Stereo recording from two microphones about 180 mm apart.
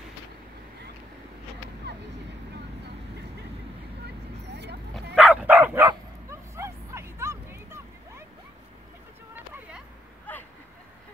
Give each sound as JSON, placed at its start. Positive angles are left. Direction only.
{"t": 1.9, "sound": "vehicle", "side_deg": -70}
{"t": 5.1, "sound": "dog", "side_deg": -5}
{"t": 5.9, "sound": "bow-wow", "side_deg": -15}
{"t": 9.3, "sound": "vehicle", "side_deg": -10}